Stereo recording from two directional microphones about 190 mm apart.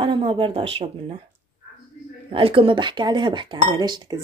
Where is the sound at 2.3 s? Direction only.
25° right (ahead or behind).